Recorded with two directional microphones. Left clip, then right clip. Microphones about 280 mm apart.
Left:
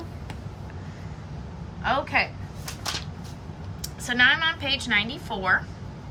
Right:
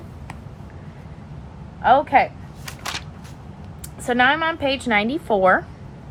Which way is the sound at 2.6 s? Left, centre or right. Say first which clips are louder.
Right 2 dB; right.